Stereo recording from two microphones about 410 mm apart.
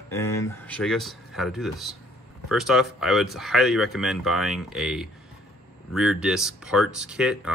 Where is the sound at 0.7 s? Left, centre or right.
Centre.